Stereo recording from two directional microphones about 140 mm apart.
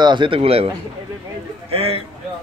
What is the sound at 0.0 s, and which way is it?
Speech, 35° right (ahead or behind).